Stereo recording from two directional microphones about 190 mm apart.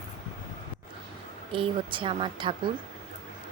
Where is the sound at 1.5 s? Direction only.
25° right (ahead or behind).